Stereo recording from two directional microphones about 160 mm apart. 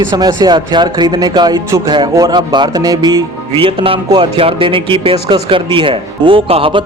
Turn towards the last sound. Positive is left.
turn(degrees=-35)  # may be behind; listen again after turning